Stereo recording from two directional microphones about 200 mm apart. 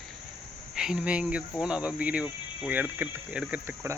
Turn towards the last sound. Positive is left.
turn(degrees=-5)  # may be behind; listen again after turning